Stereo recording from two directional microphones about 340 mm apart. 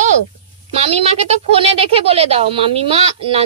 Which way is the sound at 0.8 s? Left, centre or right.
Centre.